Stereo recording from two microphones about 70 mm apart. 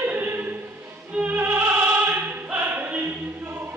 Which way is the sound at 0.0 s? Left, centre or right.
Right.